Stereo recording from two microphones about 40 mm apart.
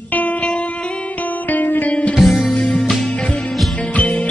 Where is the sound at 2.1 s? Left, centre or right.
Centre.